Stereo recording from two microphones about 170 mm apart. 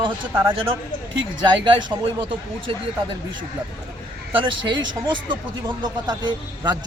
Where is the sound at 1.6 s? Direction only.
25° right (ahead or behind).